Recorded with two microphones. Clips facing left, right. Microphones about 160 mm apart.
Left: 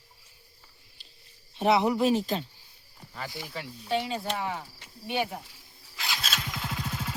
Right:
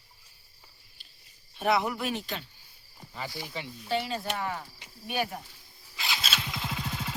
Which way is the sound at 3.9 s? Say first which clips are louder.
Left 1 dB; 15° left (ahead or behind).